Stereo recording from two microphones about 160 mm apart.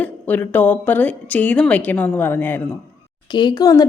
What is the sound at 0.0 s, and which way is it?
A woman's voice, 10° left (ahead or behind).